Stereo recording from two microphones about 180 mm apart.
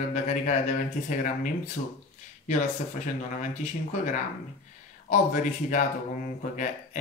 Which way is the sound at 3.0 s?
45° left (ahead or behind).